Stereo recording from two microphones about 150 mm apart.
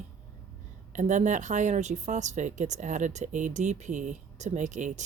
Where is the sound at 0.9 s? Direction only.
55° right (ahead or behind).